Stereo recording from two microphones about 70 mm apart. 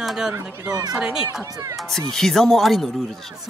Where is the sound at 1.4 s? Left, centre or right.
Right.